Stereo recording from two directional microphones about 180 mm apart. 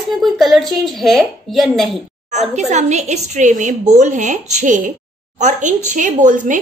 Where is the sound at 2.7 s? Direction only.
40° right (ahead or behind).